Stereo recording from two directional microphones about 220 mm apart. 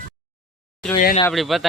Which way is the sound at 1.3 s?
Centre (ahead or behind).